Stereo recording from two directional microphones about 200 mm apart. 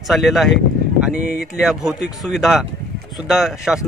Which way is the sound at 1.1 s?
35° right (ahead or behind).